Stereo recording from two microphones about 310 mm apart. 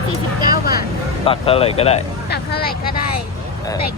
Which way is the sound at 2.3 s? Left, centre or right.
Left.